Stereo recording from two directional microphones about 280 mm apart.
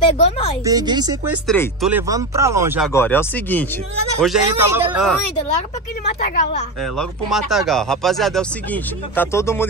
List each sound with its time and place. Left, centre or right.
0.2 s a woman's voice: left
0.7 s speech: centre
1.5 s speech: centre
2.9 s speech: centre
4.2 s speech: centre
6.0 s a woman's voice: left
6.8 s speech: centre